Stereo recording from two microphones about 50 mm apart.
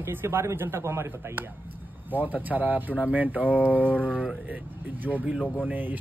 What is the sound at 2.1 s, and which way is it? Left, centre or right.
Speech, right.